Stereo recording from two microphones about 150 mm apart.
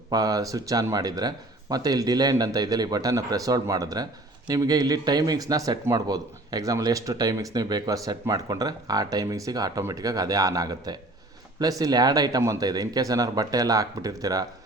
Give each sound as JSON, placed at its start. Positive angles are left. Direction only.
{"t": 0.1, "sound": "speech", "side_deg": -25}